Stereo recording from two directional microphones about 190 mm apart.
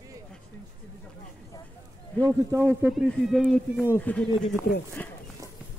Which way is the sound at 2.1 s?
15° right (ahead or behind).